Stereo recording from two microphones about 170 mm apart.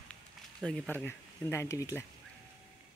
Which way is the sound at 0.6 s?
5° left (ahead or behind).